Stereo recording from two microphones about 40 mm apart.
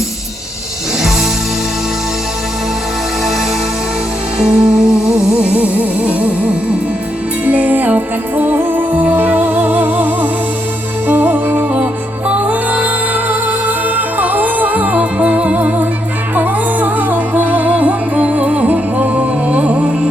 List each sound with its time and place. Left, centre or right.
1.0 s music: centre
4.4 s music: centre
5.3 s music: right
7.4 s music: right
12.3 s music: right